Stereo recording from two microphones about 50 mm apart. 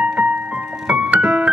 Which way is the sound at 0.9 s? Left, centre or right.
Centre.